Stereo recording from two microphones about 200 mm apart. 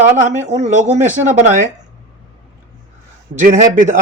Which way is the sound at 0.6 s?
35° right (ahead or behind).